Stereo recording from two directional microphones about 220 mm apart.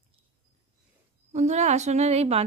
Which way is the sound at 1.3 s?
30° right (ahead or behind).